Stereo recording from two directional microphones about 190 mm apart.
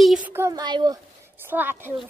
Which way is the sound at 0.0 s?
5° right (ahead or behind).